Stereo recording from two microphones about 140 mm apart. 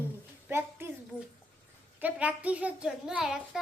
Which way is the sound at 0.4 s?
15° right (ahead or behind).